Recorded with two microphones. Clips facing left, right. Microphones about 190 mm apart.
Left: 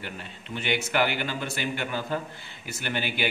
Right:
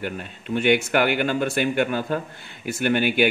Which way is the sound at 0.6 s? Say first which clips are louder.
Right 7 dB; 55° right (ahead or behind).